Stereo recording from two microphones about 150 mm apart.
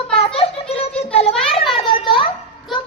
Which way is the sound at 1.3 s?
Centre (ahead or behind).